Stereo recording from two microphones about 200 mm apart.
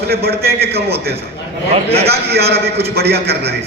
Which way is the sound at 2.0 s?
55° right (ahead or behind).